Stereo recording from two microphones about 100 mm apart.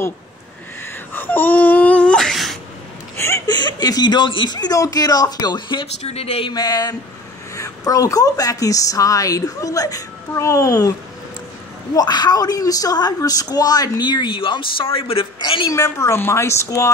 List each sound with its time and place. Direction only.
1.1 s wail: 20° left (ahead or behind); by 2.6 s centre (ahead or behind)
3.2 s a sound: 25° left (ahead or behind)
3.4 s a woman's voice: 45° left (ahead or behind)
6.0 s speech: 90° left
6.5 s a woman's voice: 40° left (ahead or behind); by 15.6 s 60° left (ahead or behind)
15.7 s speech: 30° left (ahead or behind)